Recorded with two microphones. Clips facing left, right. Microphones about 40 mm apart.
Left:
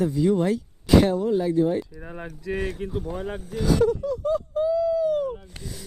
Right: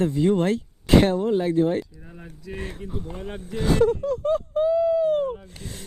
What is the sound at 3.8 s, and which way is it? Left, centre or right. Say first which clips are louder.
Speech: right 1 dB; right.